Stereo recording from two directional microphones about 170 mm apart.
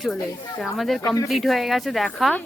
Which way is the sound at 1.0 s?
20° left (ahead or behind).